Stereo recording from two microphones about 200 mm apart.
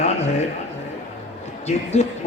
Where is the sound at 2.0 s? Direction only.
35° left (ahead or behind).